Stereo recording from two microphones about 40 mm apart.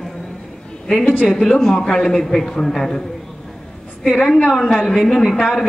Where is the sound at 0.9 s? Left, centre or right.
Left.